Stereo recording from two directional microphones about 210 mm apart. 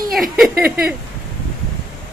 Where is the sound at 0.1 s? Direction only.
Centre (ahead or behind).